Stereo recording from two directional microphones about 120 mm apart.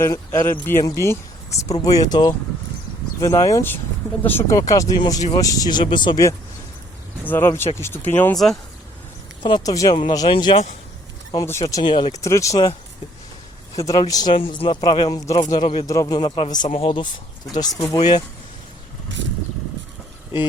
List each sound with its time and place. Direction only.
0.0 s speech: 25° left (ahead or behind); by 6.2 s 40° left (ahead or behind)
7.3 s speech: 20° left (ahead or behind)
9.4 s speech: 35° left (ahead or behind)
11.6 s speech: 35° left (ahead or behind)
12.2 s speech: 25° left (ahead or behind)
13.7 s speech: 30° left (ahead or behind)
14.3 s speech: 45° left (ahead or behind)
15.9 s speech: 30° left (ahead or behind)
16.6 s speech: 50° left (ahead or behind)
17.5 s speech: 30° left (ahead or behind)